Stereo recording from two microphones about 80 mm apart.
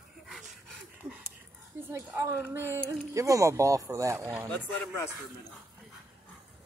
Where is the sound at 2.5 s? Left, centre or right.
Right.